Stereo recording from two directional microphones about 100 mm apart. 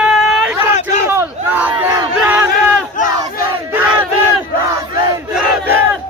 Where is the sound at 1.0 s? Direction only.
20° right (ahead or behind).